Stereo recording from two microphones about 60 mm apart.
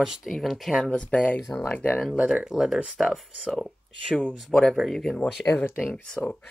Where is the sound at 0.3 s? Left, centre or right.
Centre.